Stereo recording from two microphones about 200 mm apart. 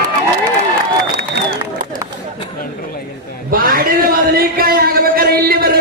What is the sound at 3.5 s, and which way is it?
A man's voice, 45° right (ahead or behind).